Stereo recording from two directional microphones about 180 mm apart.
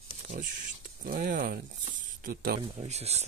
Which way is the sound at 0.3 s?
50° right (ahead or behind).